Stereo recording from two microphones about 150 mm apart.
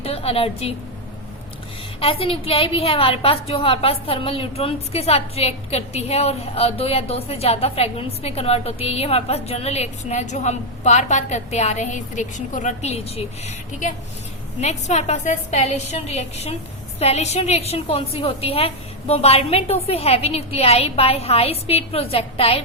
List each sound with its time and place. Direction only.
0.0 s a woman's voice: 40° left (ahead or behind)
2.0 s a woman's voice: 40° left (ahead or behind)
14.6 s a woman's voice: 50° left (ahead or behind)